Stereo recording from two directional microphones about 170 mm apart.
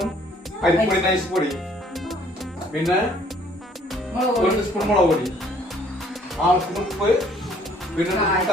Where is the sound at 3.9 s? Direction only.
Centre (ahead or behind).